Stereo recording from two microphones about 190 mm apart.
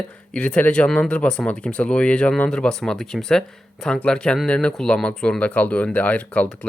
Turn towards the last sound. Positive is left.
turn(degrees=5)  # may be behind; listen again after turning